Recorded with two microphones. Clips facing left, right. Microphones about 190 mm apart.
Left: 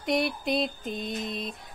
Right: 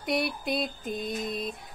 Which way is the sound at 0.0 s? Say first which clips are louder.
Left 2 dB; centre (ahead or behind).